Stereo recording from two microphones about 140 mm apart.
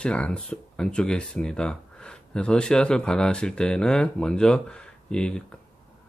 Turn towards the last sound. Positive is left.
turn(degrees=5)  # may be behind; listen again after turning